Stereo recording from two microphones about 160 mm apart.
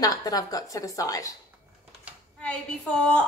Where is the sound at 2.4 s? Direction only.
5° left (ahead or behind).